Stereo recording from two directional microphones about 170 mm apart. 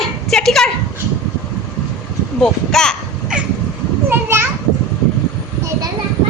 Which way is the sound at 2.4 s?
5° left (ahead or behind).